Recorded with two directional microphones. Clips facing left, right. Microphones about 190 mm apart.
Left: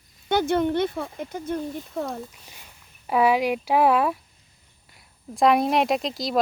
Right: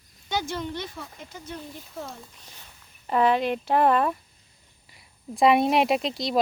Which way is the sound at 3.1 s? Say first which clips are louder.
Left 2 dB; 10° left (ahead or behind).